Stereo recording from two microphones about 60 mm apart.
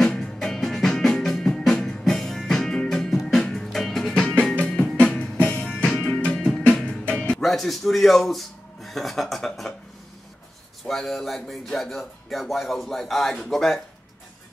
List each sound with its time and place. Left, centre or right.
0.0 s music: centre
4.6 s music: left
7.2 s speech: centre
10.9 s speech: centre